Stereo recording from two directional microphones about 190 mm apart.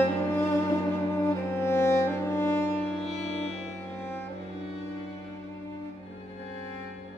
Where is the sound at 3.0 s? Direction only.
35° left (ahead or behind).